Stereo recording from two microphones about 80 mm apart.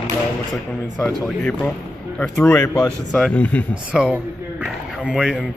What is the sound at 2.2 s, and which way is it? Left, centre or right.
A man's voice, centre.